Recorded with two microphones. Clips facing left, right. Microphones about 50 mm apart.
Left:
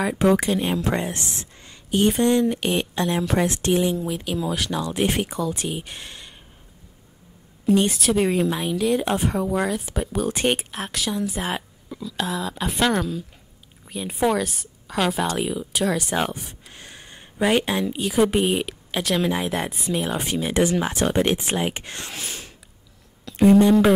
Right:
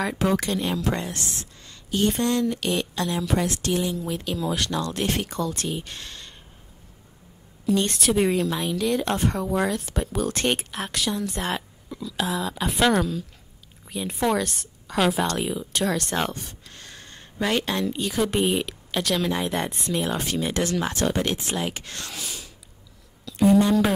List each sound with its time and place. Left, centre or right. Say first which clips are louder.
0.0 s a woman's voice: left 4 dB; centre; by 4.0 s left
4.1 s speech: left 1 dB; centre
7.8 s a woman's voice: left 1 dB; centre; by 22.2 s left
22.2 s mechanisms: left 2 dB; left
23.2 s a sound: left 3 dB; left